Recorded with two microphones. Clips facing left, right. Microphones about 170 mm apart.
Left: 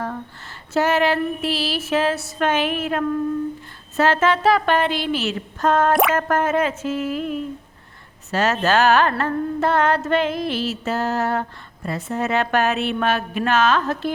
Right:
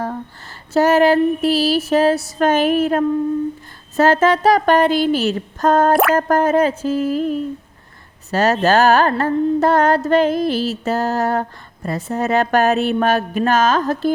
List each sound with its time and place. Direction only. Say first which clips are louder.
0.7 s carnatic music: right 6 dB; 40° right (ahead or behind)
5.9 s a sound: right 3 dB; centre (ahead or behind)
6.1 s carnatic music: right 5 dB; 35° right (ahead or behind)